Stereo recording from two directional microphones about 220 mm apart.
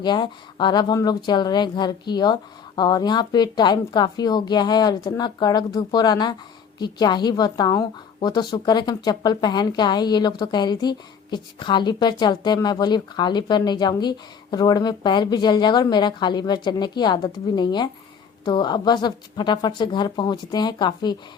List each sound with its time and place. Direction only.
0.0 s a woman's voice: 20° left (ahead or behind)